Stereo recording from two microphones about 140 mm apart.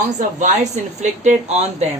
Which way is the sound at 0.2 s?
60° right (ahead or behind).